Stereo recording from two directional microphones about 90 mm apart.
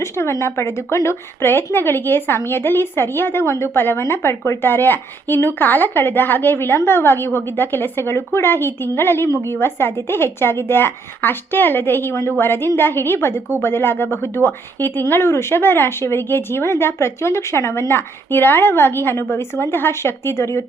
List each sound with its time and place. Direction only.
0.0 s a woman's voice: 30° left (ahead or behind)